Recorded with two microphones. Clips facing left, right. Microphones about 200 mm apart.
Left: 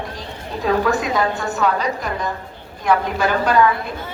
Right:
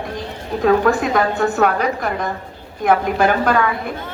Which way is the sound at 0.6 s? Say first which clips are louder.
Right 4 dB; 50° right (ahead or behind).